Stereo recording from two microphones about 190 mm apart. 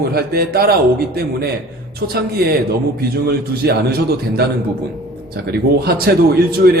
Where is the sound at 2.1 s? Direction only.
55° right (ahead or behind).